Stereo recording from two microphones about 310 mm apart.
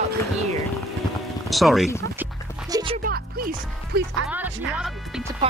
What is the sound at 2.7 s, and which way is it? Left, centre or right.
Music, centre.